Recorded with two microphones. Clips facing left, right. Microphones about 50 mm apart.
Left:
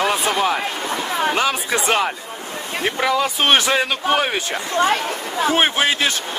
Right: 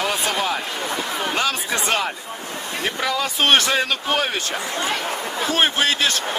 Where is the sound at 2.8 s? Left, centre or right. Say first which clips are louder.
Left 4 dB; centre.